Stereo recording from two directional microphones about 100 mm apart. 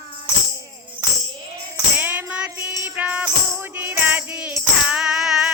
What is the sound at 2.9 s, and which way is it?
Music, 15° right (ahead or behind).